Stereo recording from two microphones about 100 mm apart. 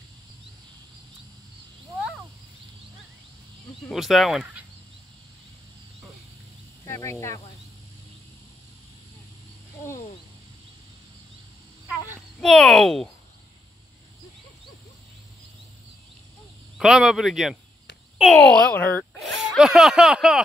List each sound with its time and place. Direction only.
3.9 s speech: centre (ahead or behind)
6.8 s speech: 35° left (ahead or behind)
12.4 s speech: 5° left (ahead or behind)
16.7 s speech: 5° right (ahead or behind)
18.3 s speech: 10° left (ahead or behind)
19.1 s speech: centre (ahead or behind)